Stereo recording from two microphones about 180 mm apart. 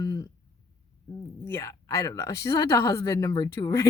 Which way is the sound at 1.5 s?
15° left (ahead or behind).